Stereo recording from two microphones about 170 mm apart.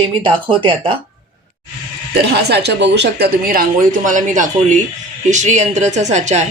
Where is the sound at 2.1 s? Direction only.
75° right (ahead or behind).